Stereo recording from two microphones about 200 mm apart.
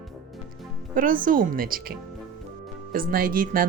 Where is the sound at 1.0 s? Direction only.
45° right (ahead or behind).